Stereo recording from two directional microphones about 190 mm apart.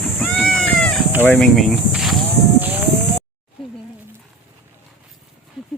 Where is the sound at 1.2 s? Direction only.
5° left (ahead or behind).